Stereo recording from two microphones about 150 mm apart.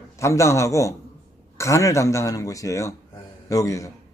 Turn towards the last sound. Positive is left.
turn(degrees=20)  # may be behind; listen again after turning